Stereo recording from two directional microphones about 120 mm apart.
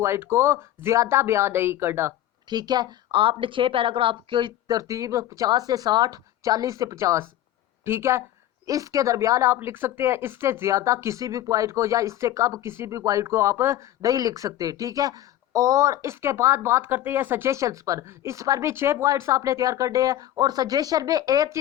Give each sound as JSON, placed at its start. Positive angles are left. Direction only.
{"t": 0.0, "sound": "speech", "side_deg": -20}
{"t": 2.5, "sound": "speech", "side_deg": -35}
{"t": 4.8, "sound": "speech", "side_deg": -30}